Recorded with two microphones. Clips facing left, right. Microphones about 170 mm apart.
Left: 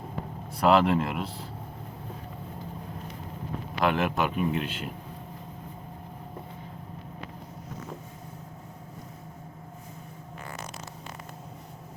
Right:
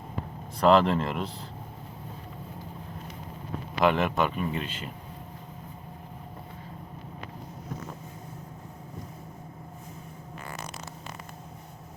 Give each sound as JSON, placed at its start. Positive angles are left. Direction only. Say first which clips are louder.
{"t": 0.6, "sound": "speech", "louder": "right 1 dB", "side_deg": 5}
{"t": 3.8, "sound": "speech", "louder": "right 2 dB", "side_deg": 0}